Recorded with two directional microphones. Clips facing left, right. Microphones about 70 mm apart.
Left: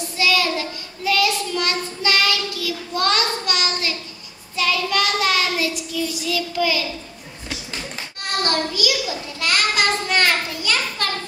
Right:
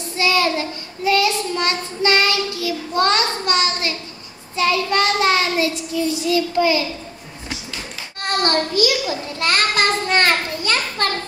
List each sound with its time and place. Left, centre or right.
0.2 s child singing: right
6.2 s a child's voice: right
8.2 s a child's voice: right